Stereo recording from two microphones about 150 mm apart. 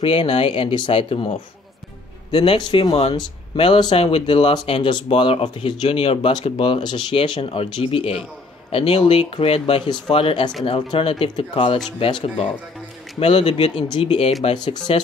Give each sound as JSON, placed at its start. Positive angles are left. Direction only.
{"t": 0.0, "sound": "speech", "side_deg": 35}